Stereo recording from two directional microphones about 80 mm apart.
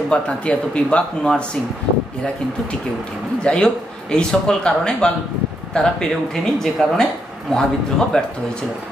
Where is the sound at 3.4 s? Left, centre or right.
Centre.